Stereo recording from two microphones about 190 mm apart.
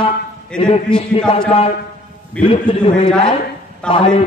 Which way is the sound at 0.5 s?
5° left (ahead or behind).